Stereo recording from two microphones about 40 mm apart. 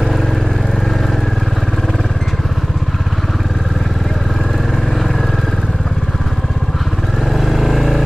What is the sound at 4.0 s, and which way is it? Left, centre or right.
Vehicle, centre.